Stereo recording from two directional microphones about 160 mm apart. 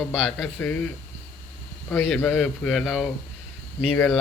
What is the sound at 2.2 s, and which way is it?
Speech, 5° left (ahead or behind).